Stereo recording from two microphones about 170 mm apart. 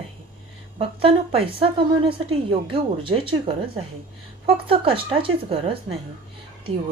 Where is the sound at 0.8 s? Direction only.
35° right (ahead or behind).